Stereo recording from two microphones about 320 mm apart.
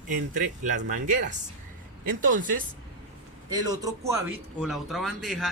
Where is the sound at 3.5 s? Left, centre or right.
Centre.